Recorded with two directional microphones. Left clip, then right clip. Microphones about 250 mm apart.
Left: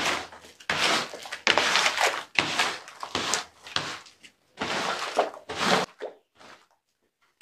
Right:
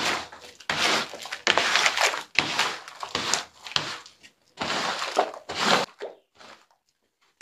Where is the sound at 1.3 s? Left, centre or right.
Right.